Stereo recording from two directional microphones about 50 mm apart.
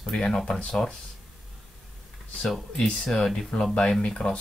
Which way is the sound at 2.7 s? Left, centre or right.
Centre.